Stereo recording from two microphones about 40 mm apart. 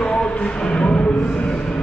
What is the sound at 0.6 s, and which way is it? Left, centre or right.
Music, left.